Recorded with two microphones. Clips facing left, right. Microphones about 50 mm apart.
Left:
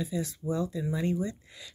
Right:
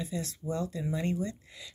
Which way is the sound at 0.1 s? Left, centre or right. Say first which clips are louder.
Left 3 dB; centre.